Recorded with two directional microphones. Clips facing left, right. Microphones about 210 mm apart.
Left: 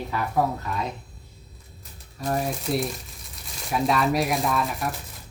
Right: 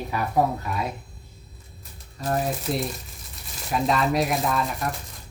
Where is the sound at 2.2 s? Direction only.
Centre (ahead or behind).